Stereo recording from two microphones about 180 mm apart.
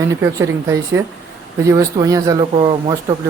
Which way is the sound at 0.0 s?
15° right (ahead or behind).